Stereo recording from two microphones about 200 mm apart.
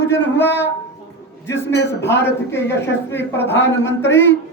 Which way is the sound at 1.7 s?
60° left (ahead or behind).